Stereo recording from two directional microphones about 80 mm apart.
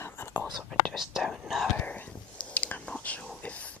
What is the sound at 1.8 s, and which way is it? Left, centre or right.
Whispering, left.